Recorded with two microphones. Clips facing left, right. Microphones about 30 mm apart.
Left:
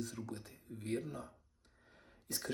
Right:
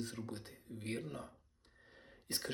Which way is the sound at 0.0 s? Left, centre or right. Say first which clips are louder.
Even; right.